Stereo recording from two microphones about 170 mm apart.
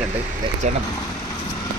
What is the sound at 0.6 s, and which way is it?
Speech, 45° right (ahead or behind).